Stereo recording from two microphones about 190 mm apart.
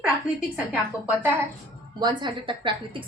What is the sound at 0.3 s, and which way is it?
Speech, 5° right (ahead or behind).